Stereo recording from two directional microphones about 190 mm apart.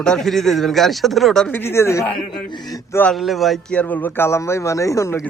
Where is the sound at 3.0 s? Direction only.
Centre (ahead or behind).